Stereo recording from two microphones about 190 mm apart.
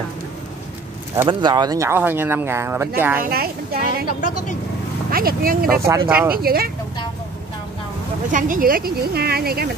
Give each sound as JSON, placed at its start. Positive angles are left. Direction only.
{"t": 1.1, "sound": "speech", "side_deg": -20}
{"t": 3.3, "sound": "speech", "side_deg": -55}
{"t": 5.1, "sound": "speech", "side_deg": -50}
{"t": 5.9, "sound": "speech", "side_deg": -15}
{"t": 6.3, "sound": "speech", "side_deg": -50}
{"t": 8.3, "sound": "speech", "side_deg": -45}